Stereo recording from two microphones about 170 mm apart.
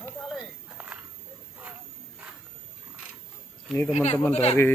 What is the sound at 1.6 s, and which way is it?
Wild animals, 10° right (ahead or behind).